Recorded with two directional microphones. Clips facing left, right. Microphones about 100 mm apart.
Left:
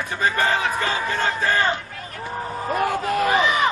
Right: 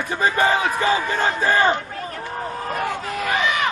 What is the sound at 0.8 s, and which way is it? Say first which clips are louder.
Battle cry: right 3 dB; 10° right (ahead or behind).